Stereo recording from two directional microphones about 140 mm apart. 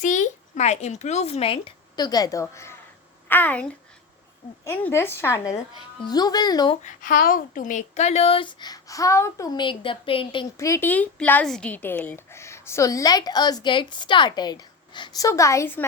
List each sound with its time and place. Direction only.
0.0 s speech: 65° left (ahead or behind); by 1.7 s 45° left (ahead or behind)
2.0 s a woman's voice: 30° left (ahead or behind)
6.8 s speech: 75° left (ahead or behind); by 9.5 s 20° left (ahead or behind)
9.6 s a woman's voice: 35° left (ahead or behind)
10.6 s a woman's voice: 15° left (ahead or behind)